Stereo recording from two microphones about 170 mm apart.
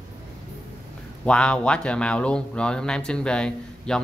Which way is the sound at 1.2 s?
5° left (ahead or behind).